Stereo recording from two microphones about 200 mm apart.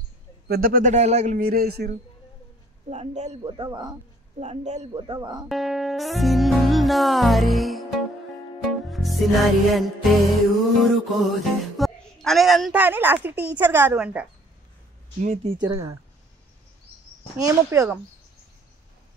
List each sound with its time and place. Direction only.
0.5 s speech: 45° right (ahead or behind)
2.9 s a man's voice: 35° right (ahead or behind)
4.4 s a man's voice: 35° right (ahead or behind)
5.5 s music: centre (ahead or behind)
8.8 s music: centre (ahead or behind)
10.8 s speech: centre (ahead or behind)
15.1 s speech: 35° right (ahead or behind)
15.6 s speech: 15° right (ahead or behind)
17.4 s speech: 15° right (ahead or behind)